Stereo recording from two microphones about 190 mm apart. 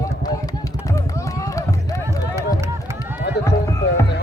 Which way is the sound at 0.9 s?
15° left (ahead or behind).